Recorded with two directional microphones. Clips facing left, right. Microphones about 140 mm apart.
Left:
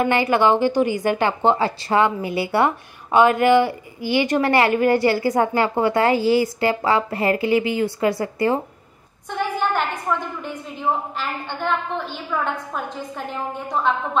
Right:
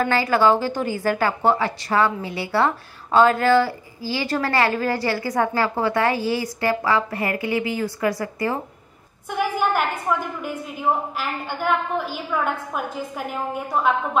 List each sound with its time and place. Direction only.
0.0 s a woman's voice: 20° left (ahead or behind)
9.3 s a woman's voice: 10° right (ahead or behind)